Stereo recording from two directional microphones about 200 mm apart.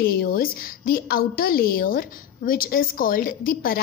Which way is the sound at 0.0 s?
50° left (ahead or behind).